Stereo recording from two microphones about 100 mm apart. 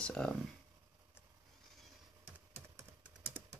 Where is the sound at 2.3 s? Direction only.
25° right (ahead or behind).